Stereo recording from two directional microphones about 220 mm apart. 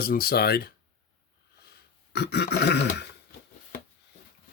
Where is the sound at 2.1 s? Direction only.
50° left (ahead or behind).